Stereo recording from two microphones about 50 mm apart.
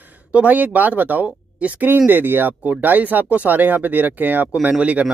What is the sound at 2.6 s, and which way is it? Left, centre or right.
Speech, right.